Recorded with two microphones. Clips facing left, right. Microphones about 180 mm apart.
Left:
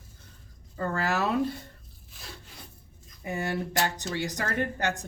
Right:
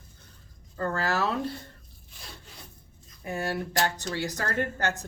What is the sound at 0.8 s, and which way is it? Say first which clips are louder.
Speech: even; 15° left (ahead or behind).